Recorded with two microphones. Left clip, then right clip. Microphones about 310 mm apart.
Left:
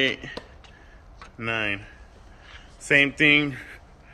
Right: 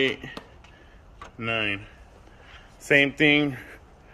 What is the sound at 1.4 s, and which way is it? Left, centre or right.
Speech, centre.